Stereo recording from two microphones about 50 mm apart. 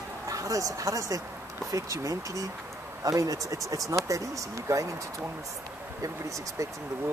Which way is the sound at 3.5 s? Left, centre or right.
Right.